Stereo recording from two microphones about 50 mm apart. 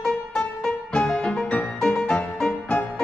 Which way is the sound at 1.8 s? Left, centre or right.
Centre.